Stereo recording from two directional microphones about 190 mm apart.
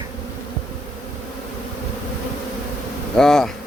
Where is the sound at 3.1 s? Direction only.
Centre (ahead or behind).